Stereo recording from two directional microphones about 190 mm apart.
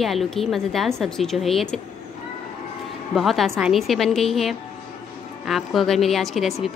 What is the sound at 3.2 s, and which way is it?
A woman's voice, centre (ahead or behind).